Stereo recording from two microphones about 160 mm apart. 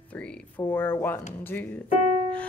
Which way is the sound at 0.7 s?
15° left (ahead or behind).